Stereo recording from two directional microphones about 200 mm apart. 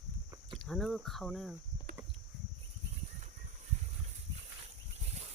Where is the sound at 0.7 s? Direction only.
Centre (ahead or behind).